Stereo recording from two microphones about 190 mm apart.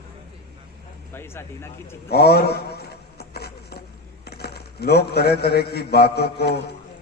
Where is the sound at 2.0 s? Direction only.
55° left (ahead or behind).